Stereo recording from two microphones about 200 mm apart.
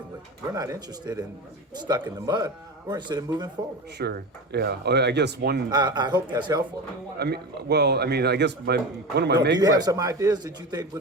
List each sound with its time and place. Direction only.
0.5 s a man's voice: 20° right (ahead or behind)
3.9 s speech: 55° right (ahead or behind)
5.7 s a man's voice: 20° right (ahead or behind)
7.2 s speech: 55° right (ahead or behind)
9.6 s a man's voice: 20° right (ahead or behind)